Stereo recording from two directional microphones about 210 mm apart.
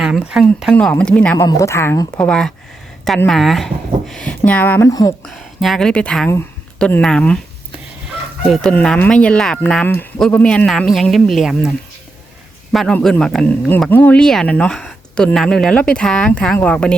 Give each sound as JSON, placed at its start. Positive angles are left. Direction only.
{"t": 0.0, "sound": "speech", "side_deg": -5}
{"t": 5.2, "sound": "speech", "side_deg": 0}
{"t": 8.4, "sound": "speech", "side_deg": 0}
{"t": 12.7, "sound": "speech", "side_deg": 0}